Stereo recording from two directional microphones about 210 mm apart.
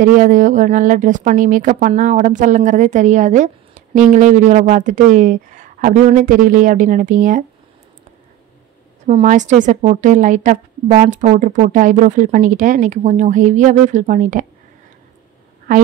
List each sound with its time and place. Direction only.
0.0 s a woman's voice: 40° right (ahead or behind)
9.0 s a woman's voice: 35° right (ahead or behind)
15.7 s a woman's voice: 40° right (ahead or behind)